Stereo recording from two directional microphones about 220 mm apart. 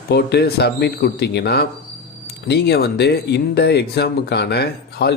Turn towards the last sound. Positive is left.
turn(degrees=50)  # may be behind; listen again after turning